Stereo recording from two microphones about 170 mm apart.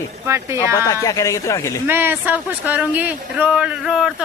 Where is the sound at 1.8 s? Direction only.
10° right (ahead or behind).